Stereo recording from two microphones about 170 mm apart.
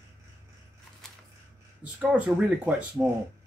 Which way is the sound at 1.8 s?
10° right (ahead or behind).